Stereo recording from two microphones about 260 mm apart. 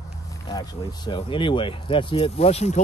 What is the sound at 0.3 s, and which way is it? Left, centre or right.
Speech, centre.